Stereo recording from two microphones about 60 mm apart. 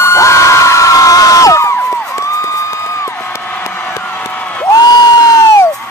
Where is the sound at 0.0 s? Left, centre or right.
Left.